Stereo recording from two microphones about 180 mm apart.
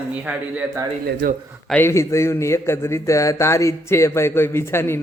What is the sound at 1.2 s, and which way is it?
Speech, 65° right (ahead or behind).